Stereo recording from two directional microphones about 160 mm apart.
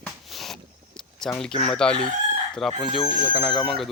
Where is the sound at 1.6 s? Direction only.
5° left (ahead or behind).